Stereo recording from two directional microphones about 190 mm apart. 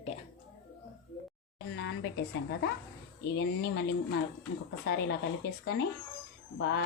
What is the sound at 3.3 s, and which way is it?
Speech, 60° left (ahead or behind).